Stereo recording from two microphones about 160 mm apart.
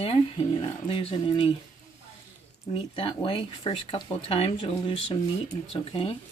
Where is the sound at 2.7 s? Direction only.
35° left (ahead or behind).